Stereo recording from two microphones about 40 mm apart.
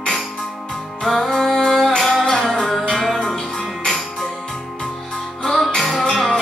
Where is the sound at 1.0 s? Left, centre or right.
Centre.